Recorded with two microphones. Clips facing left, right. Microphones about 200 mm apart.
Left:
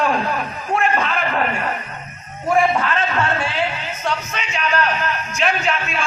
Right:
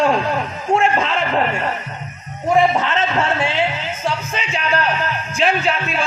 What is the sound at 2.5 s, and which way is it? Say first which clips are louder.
A man's voice: right 2 dB; 20° right (ahead or behind).